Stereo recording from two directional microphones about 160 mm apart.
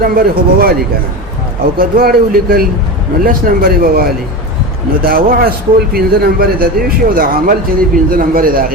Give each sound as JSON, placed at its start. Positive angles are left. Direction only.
{"t": 0.0, "sound": "a man's voice", "side_deg": -65}
{"t": 1.8, "sound": "a man's voice", "side_deg": -65}